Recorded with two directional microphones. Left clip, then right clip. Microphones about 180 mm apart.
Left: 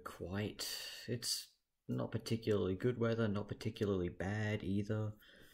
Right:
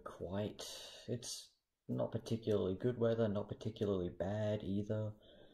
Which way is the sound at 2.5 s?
10° left (ahead or behind).